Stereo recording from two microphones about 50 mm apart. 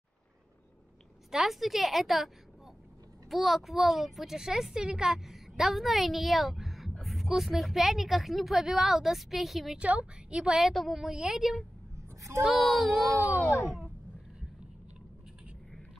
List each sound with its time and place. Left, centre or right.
1.3 s a child's voice: centre
7.0 s a sound: centre
7.2 s a child's voice: centre
9.8 s a woman's voice: right
10.7 s a child's voice: centre